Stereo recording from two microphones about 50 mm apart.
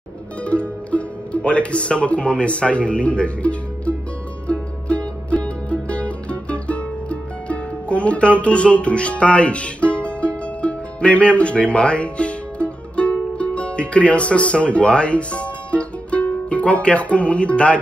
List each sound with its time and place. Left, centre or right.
0.5 s speech: left
4.5 s music: left